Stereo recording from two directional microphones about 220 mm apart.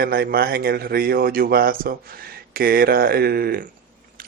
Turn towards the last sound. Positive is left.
turn(degrees=-45)  # may be behind; listen again after turning